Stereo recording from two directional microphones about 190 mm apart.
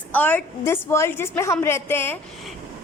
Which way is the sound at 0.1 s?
10° left (ahead or behind).